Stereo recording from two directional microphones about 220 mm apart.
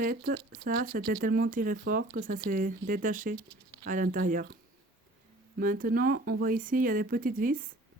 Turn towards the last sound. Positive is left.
turn(degrees=-40)  # may be behind; listen again after turning